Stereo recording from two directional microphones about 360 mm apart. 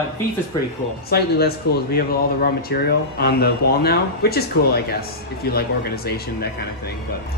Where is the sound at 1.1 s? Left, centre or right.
Left.